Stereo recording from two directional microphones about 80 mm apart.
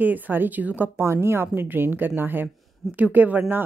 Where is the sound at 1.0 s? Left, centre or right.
Right.